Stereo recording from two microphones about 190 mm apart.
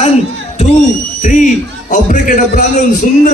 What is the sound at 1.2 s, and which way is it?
A man's voice, 40° left (ahead or behind).